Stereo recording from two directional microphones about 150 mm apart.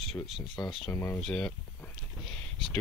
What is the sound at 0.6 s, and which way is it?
Speech, 25° left (ahead or behind).